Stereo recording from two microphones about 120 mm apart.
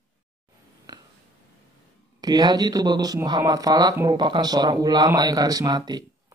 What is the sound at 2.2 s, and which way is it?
Speech, 35° right (ahead or behind).